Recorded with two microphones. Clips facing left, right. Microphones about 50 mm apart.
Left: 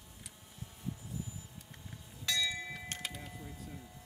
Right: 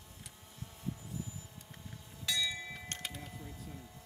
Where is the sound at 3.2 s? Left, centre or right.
Centre.